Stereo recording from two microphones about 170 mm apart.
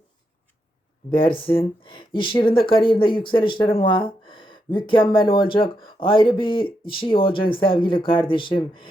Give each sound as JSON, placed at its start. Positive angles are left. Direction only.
{"t": 1.2, "sound": "speech", "side_deg": 30}